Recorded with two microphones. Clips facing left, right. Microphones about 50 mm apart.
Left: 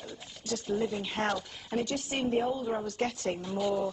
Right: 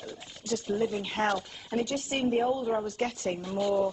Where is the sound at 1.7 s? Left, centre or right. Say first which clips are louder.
Right 2 dB; centre.